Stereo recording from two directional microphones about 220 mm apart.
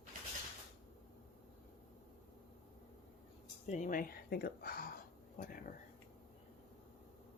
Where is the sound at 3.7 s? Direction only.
35° left (ahead or behind).